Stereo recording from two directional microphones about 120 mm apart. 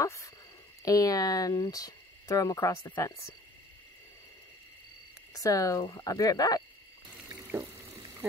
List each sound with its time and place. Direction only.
0.0 s speech: 25° left (ahead or behind)
5.3 s speech: 30° left (ahead or behind)
7.2 s water tap: 30° right (ahead or behind)